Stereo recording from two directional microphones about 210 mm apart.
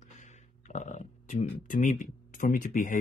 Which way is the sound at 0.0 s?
35° left (ahead or behind).